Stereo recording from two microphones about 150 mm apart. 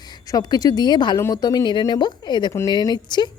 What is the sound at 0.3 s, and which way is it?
A woman's voice, 25° left (ahead or behind).